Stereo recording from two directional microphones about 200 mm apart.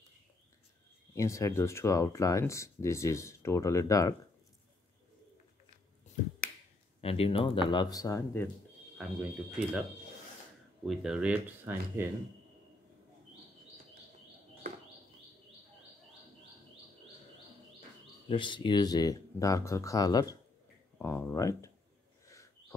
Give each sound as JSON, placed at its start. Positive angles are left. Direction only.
{"t": 1.1, "sound": "speech", "side_deg": 15}
{"t": 7.0, "sound": "speech", "side_deg": 30}
{"t": 8.9, "sound": "speech", "side_deg": -5}
{"t": 10.9, "sound": "speech", "side_deg": -5}
{"t": 18.3, "sound": "speech", "side_deg": 25}
{"t": 22.2, "sound": "a sound", "side_deg": 15}